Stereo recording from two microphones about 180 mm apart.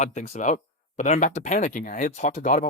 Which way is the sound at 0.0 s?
40° left (ahead or behind).